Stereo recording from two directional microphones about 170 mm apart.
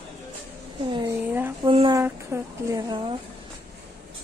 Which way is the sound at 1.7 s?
30° right (ahead or behind).